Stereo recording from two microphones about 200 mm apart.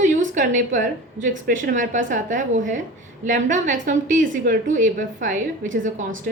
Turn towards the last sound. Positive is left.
turn(degrees=-40)  # may be behind; listen again after turning